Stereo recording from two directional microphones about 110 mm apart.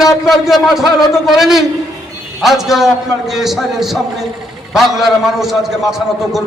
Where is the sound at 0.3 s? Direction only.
Centre (ahead or behind).